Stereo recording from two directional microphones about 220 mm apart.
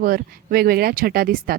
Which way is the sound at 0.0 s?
40° right (ahead or behind).